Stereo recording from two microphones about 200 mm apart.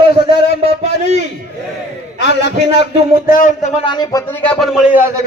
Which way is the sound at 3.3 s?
40° left (ahead or behind).